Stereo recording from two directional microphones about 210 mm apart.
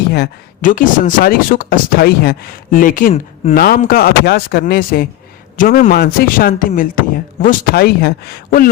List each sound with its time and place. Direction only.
0.1 s speech: 45° left (ahead or behind)